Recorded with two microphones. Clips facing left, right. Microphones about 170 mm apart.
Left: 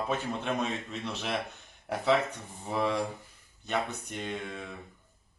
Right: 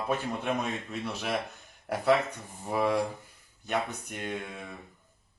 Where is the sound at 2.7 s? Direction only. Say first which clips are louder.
Right 2 dB; 10° right (ahead or behind).